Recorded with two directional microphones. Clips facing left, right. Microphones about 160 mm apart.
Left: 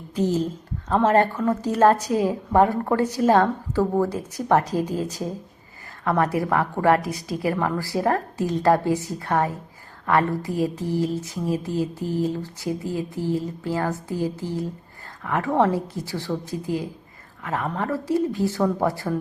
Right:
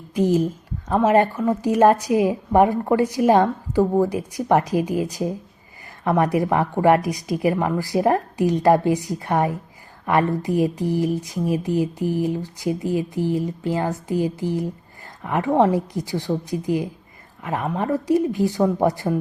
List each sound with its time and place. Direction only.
0.1 s a woman's voice: 10° right (ahead or behind)